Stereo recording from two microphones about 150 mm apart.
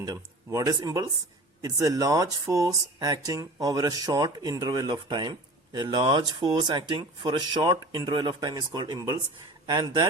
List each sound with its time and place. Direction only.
0.0 s speech: 25° right (ahead or behind)